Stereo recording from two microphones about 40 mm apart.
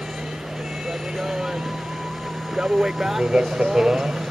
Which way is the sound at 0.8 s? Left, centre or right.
Centre.